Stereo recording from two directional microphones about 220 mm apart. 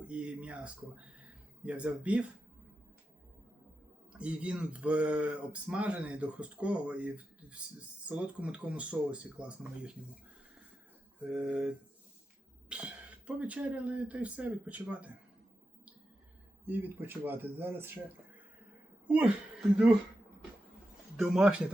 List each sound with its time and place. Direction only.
0.0 s speech: 5° right (ahead or behind)
4.2 s speech: 5° right (ahead or behind)
11.2 s speech: 5° right (ahead or behind)
16.6 s speech: 10° right (ahead or behind)
19.0 s speech: 5° right (ahead or behind)
21.2 s speech: 5° right (ahead or behind)